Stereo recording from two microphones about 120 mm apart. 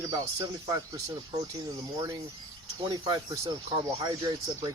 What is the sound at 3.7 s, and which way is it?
Speech, 45° right (ahead or behind).